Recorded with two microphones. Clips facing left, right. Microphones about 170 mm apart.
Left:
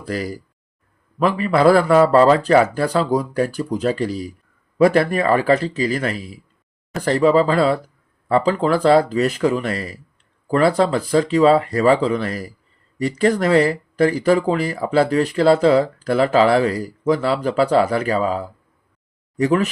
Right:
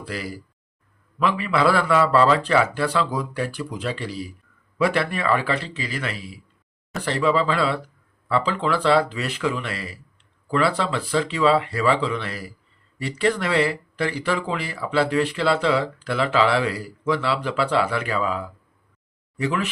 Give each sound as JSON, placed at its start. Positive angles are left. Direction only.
{"t": 0.0, "sound": "speech", "side_deg": 45}